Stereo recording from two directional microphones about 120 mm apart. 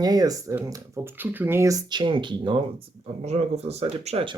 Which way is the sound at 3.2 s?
65° right (ahead or behind).